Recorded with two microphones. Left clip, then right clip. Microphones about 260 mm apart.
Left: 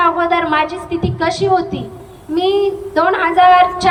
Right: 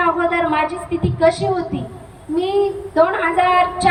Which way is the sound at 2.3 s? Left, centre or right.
Centre.